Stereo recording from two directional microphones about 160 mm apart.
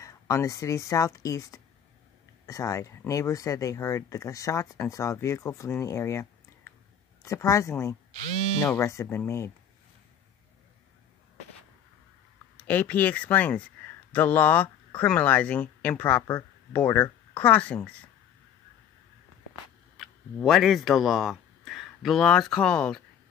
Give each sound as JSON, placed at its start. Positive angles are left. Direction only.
{"t": 0.0, "sound": "a woman's voice", "side_deg": 20}
{"t": 12.6, "sound": "a woman's voice", "side_deg": 10}
{"t": 20.0, "sound": "speech", "side_deg": 0}